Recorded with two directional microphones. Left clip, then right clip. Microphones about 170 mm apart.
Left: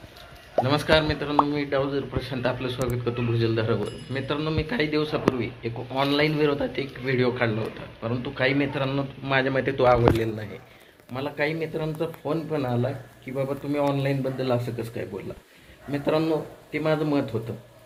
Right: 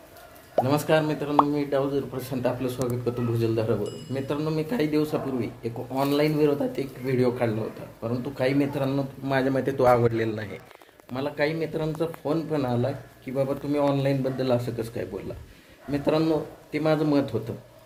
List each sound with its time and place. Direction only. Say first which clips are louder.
0.6 s speech: left 1 dB; 10° right (ahead or behind)